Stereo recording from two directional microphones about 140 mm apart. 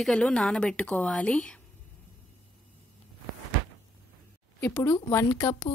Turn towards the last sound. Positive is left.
turn(degrees=20)  # may be behind; listen again after turning